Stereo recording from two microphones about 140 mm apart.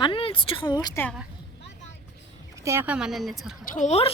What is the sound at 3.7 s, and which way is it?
Speech, 60° left (ahead or behind).